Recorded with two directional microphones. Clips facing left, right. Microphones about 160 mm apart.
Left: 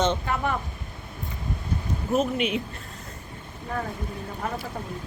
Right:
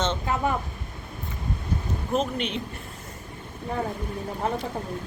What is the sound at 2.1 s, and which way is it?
Speech, 5° left (ahead or behind).